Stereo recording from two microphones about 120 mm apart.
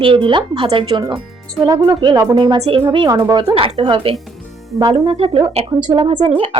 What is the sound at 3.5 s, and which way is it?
Speech, 50° right (ahead or behind).